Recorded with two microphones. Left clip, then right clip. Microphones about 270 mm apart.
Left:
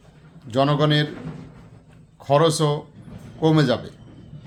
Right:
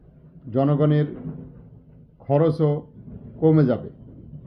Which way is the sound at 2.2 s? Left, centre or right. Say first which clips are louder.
Left 2 dB; centre.